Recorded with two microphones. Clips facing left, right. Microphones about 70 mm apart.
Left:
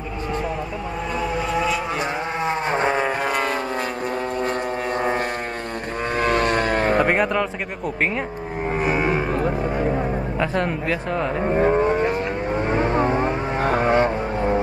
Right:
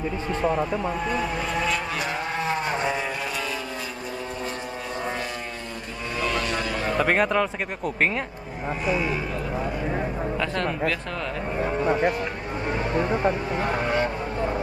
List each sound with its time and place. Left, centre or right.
1.1 s vehicle: centre
2.7 s a sound: left
6.1 s vehicle: left
7.1 s speech: centre
8.8 s a sound: left
10.4 s speech: centre
11.5 s cattle: left
12.6 s vehicle: left